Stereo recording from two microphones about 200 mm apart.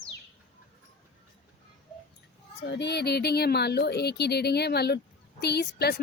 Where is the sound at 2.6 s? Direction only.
60° left (ahead or behind).